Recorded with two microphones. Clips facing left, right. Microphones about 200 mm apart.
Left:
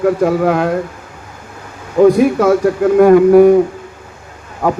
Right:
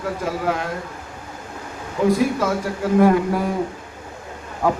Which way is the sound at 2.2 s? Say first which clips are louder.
Left 10 dB; 65° left (ahead or behind).